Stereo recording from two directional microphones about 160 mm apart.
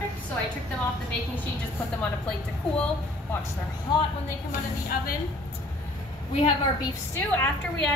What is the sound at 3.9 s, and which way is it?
Speech, 30° left (ahead or behind).